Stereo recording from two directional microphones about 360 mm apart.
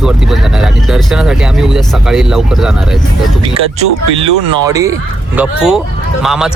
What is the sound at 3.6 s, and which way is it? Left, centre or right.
Speech, centre.